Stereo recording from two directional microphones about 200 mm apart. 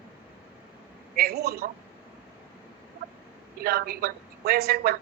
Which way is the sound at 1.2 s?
50° right (ahead or behind).